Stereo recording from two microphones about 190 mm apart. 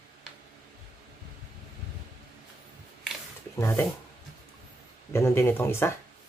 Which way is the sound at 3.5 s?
15° left (ahead or behind).